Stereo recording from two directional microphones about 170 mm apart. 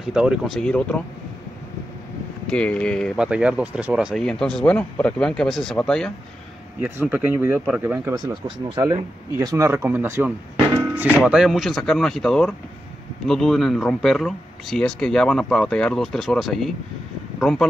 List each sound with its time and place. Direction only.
0.0 s speech: 5° right (ahead or behind)
2.4 s speech: 5° left (ahead or behind)
3.2 s speech: 5° right (ahead or behind)
6.8 s speech: 10° right (ahead or behind)
8.3 s speech: 25° right (ahead or behind); by 17.6 s 5° left (ahead or behind)